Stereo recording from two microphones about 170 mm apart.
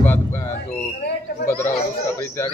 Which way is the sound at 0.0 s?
15° left (ahead or behind).